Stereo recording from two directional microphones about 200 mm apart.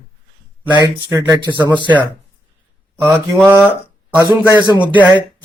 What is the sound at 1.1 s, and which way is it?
Speech, 15° right (ahead or behind).